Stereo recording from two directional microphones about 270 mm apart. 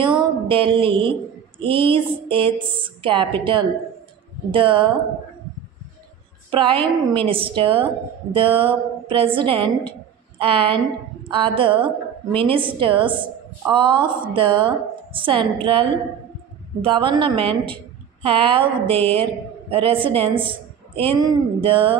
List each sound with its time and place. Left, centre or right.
0.0 s music: centre
1.6 s a woman's voice: centre
6.5 s a woman's voice: centre